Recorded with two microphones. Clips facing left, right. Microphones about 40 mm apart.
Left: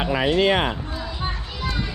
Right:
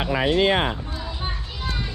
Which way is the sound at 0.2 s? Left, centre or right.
Left.